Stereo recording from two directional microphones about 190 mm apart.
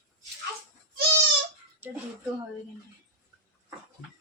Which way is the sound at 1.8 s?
10° right (ahead or behind).